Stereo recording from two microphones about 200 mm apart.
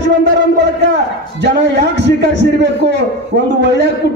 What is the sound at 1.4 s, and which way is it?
A man's voice, 60° right (ahead or behind).